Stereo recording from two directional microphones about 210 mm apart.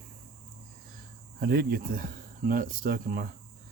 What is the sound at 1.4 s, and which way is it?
Speech, 50° right (ahead or behind).